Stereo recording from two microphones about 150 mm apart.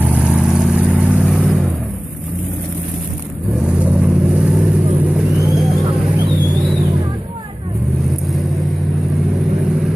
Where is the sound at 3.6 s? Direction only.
10° right (ahead or behind).